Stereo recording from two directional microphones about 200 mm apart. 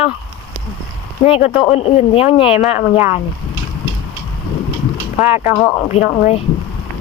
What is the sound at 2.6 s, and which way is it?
Speech, 10° right (ahead or behind).